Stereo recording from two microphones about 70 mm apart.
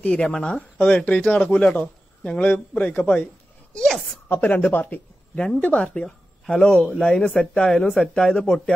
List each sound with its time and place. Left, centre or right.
0.0 s speech: centre
3.7 s a woman's voice: centre
4.3 s speech: left
6.4 s speech: centre